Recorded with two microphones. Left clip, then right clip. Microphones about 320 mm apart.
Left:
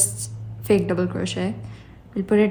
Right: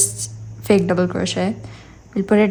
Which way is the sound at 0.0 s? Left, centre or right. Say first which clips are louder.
Right 4 dB; right.